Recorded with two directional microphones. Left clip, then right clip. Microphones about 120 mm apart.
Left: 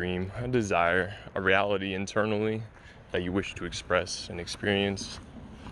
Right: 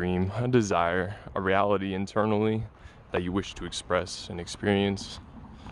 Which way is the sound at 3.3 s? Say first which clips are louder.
Even; 30° right (ahead or behind).